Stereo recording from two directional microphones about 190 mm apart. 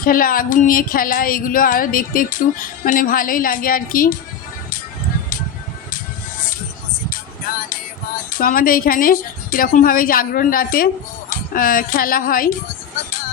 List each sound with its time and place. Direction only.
0.0 s speech: 50° left (ahead or behind)
8.3 s speech: 45° left (ahead or behind)